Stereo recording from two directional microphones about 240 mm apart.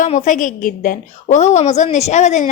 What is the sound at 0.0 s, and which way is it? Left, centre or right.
A woman's voice, left.